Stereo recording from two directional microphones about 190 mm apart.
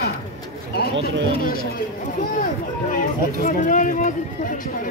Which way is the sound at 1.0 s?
50° left (ahead or behind).